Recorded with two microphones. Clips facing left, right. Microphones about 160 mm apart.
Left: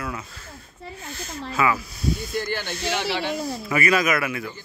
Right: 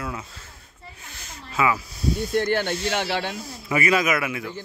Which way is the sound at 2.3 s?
60° right (ahead or behind).